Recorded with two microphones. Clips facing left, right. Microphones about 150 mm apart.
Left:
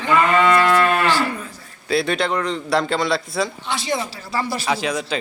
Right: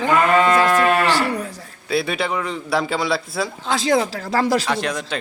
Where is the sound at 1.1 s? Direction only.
80° right.